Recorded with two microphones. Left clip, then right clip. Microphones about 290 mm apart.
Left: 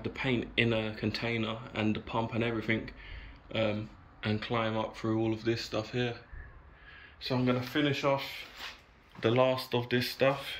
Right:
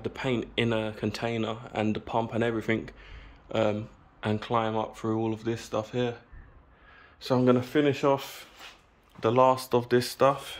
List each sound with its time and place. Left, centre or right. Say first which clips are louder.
0.0 s speech: right 3 dB; centre
7.2 s speech: right 7 dB; right
9.2 s speech: right 5 dB; centre